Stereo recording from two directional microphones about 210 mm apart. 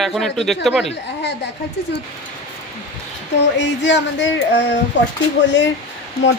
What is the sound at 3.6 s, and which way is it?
A woman's voice, 55° left (ahead or behind).